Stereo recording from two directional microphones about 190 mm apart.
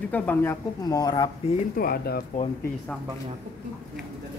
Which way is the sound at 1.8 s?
55° left (ahead or behind).